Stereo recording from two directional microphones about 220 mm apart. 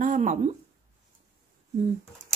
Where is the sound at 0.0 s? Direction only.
35° right (ahead or behind).